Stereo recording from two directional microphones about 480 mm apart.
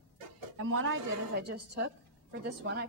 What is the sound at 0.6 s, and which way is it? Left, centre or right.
Speech, right.